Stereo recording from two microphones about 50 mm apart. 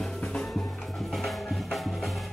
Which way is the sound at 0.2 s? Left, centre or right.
Centre.